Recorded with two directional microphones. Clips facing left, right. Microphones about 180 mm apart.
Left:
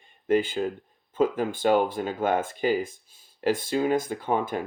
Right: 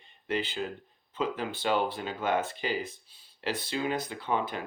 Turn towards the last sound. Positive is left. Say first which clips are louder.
# left 5 dB
turn(degrees=45)  # may be behind; listen again after turning